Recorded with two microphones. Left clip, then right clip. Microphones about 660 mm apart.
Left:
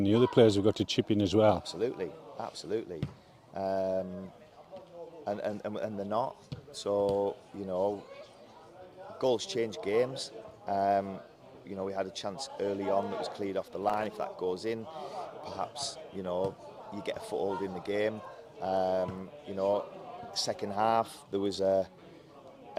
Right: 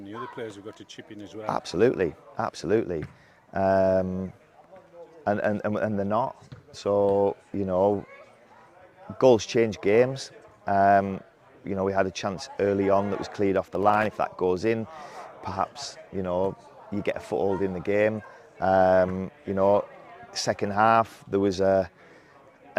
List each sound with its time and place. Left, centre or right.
0.0 s speech: left
1.5 s speech: right
5.2 s speech: right
9.1 s speech: right